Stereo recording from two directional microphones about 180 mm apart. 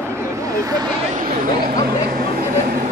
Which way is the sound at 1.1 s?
50° right (ahead or behind).